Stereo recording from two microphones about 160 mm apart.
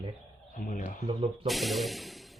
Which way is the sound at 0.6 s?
55° left (ahead or behind).